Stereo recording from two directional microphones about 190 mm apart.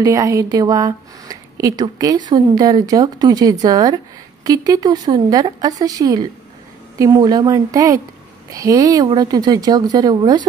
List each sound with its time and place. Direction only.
0.0 s speech: 20° right (ahead or behind)